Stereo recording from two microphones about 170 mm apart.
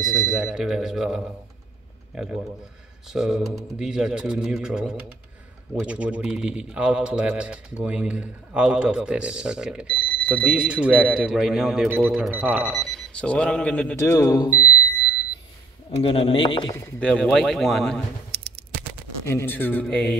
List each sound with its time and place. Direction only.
0.0 s speech: centre (ahead or behind); by 14.7 s 20° left (ahead or behind)
15.9 s speech: 35° left (ahead or behind)
17.0 s speech: 5° left (ahead or behind)
18.3 s a sound: 70° right (ahead or behind)
19.2 s speech: 15° left (ahead or behind)